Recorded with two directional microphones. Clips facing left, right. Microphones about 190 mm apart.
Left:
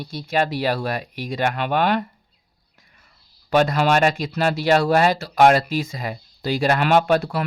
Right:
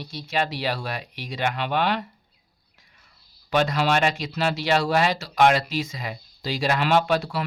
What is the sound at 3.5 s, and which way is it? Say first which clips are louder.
Speech: left 4 dB; 50° left (ahead or behind).